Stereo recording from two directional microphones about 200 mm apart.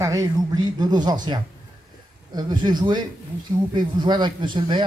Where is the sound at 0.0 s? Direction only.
15° right (ahead or behind).